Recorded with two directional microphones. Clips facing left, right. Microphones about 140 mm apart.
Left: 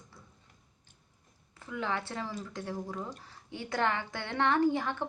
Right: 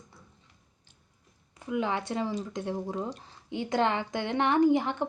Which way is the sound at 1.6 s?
15° right (ahead or behind).